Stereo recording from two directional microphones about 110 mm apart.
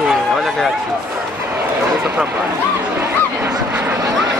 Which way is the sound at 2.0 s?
10° right (ahead or behind).